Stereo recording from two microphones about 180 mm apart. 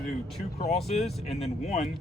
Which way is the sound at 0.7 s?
35° left (ahead or behind).